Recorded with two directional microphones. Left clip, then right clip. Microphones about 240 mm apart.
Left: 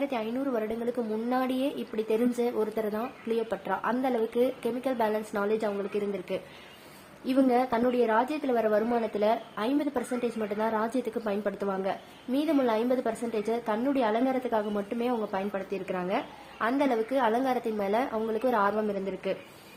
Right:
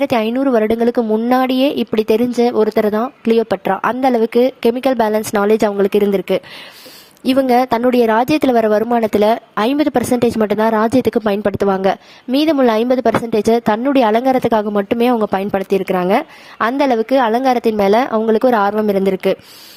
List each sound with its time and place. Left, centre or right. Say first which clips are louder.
0.0 s a woman's voice: right 15 dB; right